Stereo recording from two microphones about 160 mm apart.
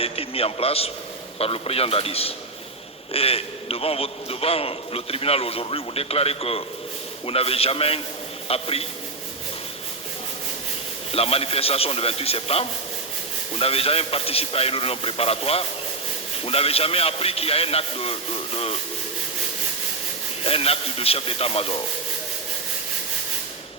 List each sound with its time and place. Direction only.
0.0 s a man's voice: 35° left (ahead or behind)
11.1 s a man's voice: 40° left (ahead or behind)
20.4 s a man's voice: 35° left (ahead or behind)